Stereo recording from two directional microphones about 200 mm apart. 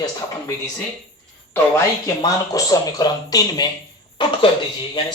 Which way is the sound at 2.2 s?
20° left (ahead or behind).